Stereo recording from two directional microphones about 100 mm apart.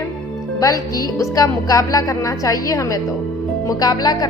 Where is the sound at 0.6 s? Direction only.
35° left (ahead or behind).